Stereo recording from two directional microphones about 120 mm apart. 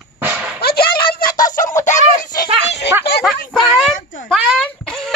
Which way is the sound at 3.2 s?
Centre (ahead or behind).